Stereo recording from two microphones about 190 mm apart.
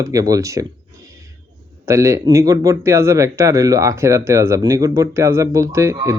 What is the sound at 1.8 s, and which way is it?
Speech, 15° right (ahead or behind).